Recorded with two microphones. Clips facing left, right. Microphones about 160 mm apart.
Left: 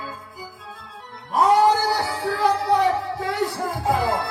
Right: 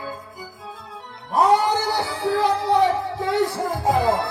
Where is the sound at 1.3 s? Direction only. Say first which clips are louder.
Left 1 dB; 20° right (ahead or behind).